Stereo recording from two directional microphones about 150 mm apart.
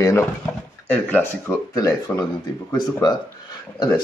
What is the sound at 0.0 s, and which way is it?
Speech, 20° left (ahead or behind).